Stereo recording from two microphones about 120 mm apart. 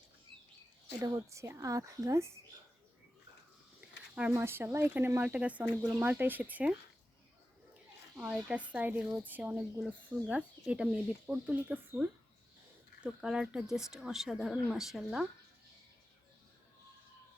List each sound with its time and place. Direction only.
1.0 s a woman's voice: 30° right (ahead or behind)
3.8 s speech: 10° right (ahead or behind)
8.2 s speech: 10° right (ahead or behind)